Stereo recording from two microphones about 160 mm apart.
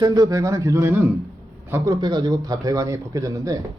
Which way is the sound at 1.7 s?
25° right (ahead or behind).